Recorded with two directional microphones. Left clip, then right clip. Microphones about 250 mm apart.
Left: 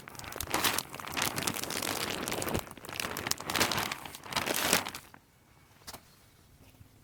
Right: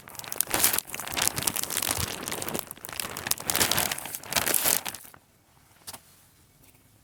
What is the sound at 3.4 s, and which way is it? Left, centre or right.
Crumpling, right.